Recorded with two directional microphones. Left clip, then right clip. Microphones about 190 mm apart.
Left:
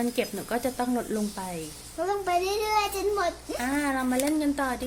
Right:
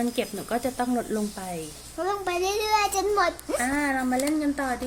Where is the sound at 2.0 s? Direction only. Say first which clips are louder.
Left 1 dB; 45° right (ahead or behind).